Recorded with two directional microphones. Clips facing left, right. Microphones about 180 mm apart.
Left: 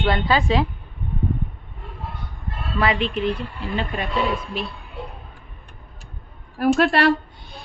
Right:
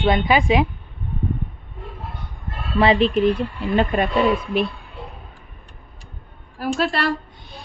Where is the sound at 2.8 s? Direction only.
30° right (ahead or behind); by 4.1 s 50° right (ahead or behind).